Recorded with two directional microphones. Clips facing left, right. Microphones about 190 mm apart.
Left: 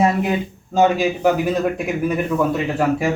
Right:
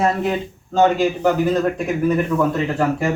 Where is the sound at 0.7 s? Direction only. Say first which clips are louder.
Even; 10° left (ahead or behind).